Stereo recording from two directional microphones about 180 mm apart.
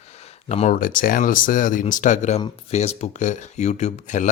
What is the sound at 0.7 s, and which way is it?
Speech, 50° left (ahead or behind).